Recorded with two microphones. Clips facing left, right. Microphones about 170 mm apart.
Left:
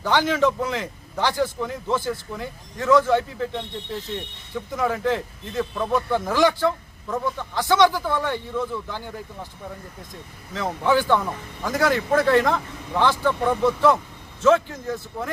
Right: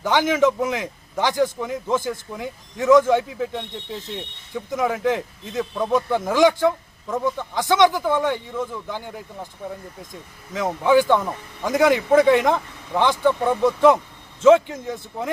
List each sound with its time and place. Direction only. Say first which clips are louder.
0.0 s speech: right 2 dB; 15° right (ahead or behind)
10.5 s speech: right 4 dB; 10° right (ahead or behind)